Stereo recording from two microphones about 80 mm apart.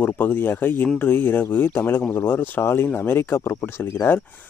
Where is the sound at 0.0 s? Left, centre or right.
Left.